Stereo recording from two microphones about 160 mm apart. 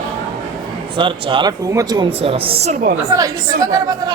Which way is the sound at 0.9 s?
30° right (ahead or behind).